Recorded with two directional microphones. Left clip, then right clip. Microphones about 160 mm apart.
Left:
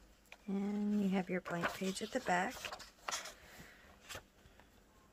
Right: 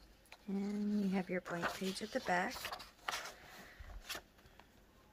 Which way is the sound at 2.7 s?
5° right (ahead or behind).